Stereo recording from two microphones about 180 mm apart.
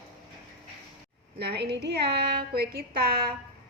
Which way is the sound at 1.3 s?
65° right (ahead or behind).